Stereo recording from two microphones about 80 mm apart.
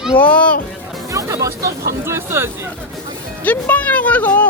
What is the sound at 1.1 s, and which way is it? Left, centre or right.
Speech, right.